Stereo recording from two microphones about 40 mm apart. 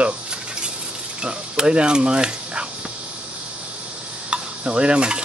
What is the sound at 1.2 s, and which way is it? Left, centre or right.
Speech, centre.